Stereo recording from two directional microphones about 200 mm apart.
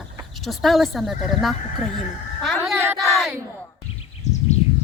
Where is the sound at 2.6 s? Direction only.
10° right (ahead or behind).